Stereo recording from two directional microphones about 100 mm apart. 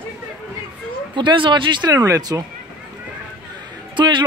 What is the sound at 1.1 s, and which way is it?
Speech, 55° right (ahead or behind).